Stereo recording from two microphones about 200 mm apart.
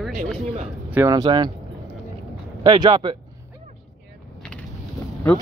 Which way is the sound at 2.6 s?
25° right (ahead or behind).